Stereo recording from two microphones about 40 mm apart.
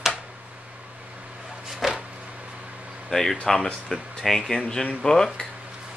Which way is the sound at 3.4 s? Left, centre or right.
Centre.